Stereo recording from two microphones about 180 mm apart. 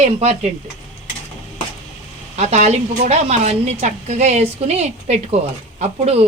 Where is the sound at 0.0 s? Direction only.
35° right (ahead or behind).